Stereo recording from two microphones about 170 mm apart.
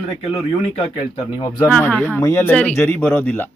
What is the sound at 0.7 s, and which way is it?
Speech, 30° left (ahead or behind).